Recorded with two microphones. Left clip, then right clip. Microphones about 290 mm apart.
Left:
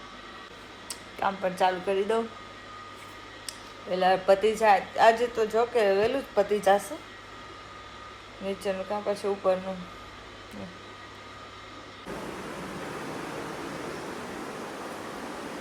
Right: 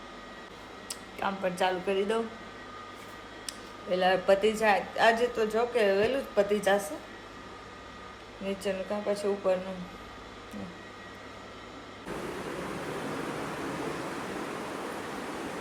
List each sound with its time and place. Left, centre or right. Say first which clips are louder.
0.9 s speech: left 4 dB; centre
3.9 s a woman's voice: left 2 dB; centre
8.4 s a woman's voice: left 2 dB; centre